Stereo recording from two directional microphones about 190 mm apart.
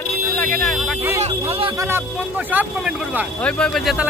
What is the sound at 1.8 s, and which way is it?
Speech, 10° right (ahead or behind).